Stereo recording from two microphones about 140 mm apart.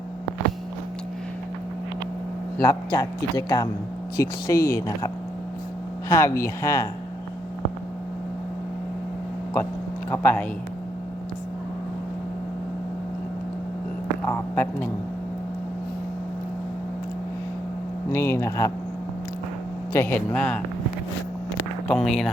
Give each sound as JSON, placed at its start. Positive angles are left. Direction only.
{"t": 2.6, "sound": "speech", "side_deg": 25}
{"t": 10.1, "sound": "speech", "side_deg": 15}
{"t": 14.3, "sound": "speech", "side_deg": 20}
{"t": 18.1, "sound": "speech", "side_deg": 20}
{"t": 19.9, "sound": "speech", "side_deg": 15}
{"t": 21.8, "sound": "speech", "side_deg": 5}